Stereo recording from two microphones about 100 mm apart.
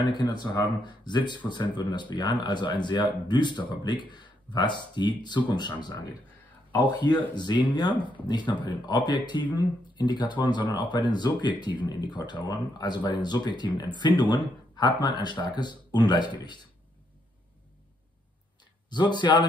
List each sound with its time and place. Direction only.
0.0 s speech: 45° left (ahead or behind)
7.9 s speech: 55° right (ahead or behind)
8.3 s speech: 50° left (ahead or behind)
18.9 s speech: 50° left (ahead or behind)